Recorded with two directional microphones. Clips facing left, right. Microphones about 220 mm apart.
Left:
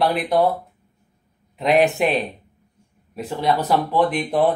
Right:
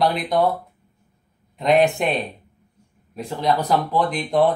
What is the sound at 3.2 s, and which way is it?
Speech, 5° left (ahead or behind).